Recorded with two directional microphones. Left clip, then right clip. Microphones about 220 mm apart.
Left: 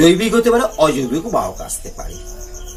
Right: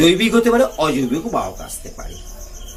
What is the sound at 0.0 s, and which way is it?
Speech, 15° right (ahead or behind).